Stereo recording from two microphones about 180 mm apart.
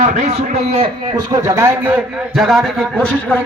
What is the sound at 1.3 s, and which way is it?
A man's voice, 20° right (ahead or behind).